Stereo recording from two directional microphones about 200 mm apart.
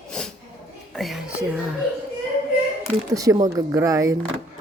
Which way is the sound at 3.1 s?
15° right (ahead or behind).